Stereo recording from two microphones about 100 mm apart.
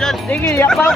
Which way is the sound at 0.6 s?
5° left (ahead or behind).